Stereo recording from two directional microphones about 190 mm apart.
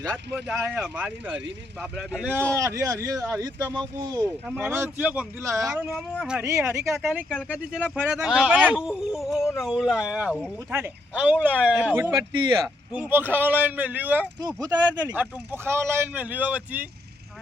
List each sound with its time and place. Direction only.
0.6 s speech: 5° right (ahead or behind)
4.4 s speech: 5° right (ahead or behind)
12.1 s speech: 20° right (ahead or behind)
12.9 s speech: 10° right (ahead or behind)